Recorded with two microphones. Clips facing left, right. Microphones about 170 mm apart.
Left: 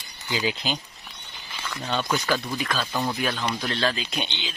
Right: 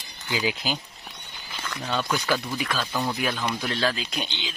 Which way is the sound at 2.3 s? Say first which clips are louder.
Even; 10° right (ahead or behind).